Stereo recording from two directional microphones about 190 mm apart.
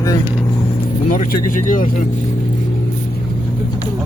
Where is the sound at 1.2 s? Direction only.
45° left (ahead or behind).